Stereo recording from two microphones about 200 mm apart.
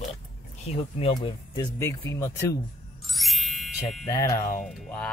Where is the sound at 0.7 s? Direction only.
30° left (ahead or behind).